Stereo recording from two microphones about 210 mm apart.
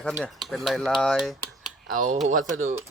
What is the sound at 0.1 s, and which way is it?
Speech, centre (ahead or behind).